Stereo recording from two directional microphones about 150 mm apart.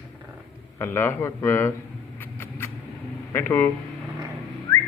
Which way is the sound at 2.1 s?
15° left (ahead or behind).